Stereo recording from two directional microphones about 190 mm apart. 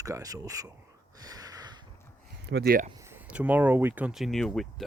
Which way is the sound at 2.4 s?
55° right (ahead or behind).